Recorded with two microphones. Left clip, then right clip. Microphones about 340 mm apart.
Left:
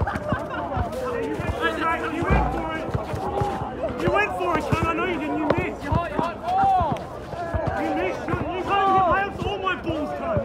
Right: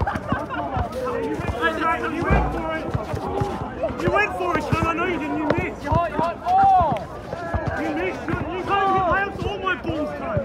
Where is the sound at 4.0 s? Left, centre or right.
Centre.